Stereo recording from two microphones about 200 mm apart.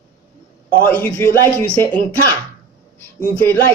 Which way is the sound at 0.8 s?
10° left (ahead or behind).